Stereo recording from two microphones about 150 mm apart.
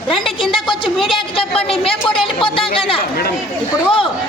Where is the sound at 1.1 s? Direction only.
40° left (ahead or behind).